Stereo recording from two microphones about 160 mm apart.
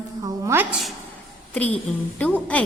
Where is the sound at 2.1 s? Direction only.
10° left (ahead or behind).